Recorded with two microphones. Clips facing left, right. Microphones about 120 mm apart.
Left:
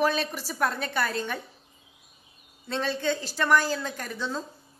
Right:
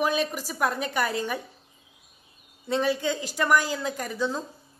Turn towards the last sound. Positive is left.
turn(degrees=-10)  # may be behind; listen again after turning